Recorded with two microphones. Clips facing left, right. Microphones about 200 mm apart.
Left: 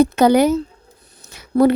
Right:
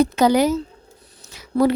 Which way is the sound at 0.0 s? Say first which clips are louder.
Left 3 dB; 60° left (ahead or behind).